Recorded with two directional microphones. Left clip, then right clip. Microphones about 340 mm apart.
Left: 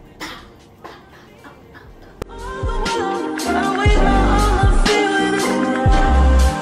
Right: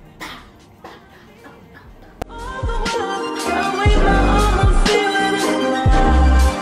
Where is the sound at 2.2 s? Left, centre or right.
Centre.